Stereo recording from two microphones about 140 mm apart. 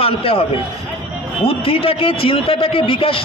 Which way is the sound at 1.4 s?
40° left (ahead or behind).